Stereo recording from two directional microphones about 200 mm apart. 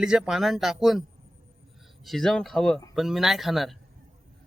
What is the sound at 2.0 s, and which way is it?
A man's voice, centre (ahead or behind).